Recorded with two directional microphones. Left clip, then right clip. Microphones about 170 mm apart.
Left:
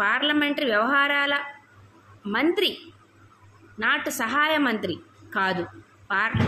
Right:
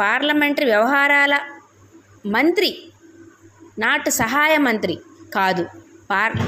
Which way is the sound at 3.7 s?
35° right (ahead or behind).